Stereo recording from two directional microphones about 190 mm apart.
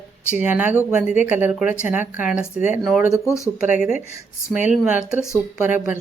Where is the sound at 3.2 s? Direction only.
15° left (ahead or behind).